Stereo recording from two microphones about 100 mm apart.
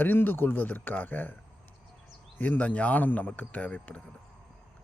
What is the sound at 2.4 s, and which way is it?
Speech, 15° left (ahead or behind).